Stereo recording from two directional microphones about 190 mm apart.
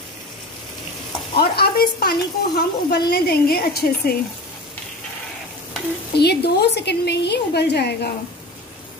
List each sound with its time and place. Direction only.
1.3 s speech: 55° left (ahead or behind)
6.1 s speech: 60° left (ahead or behind)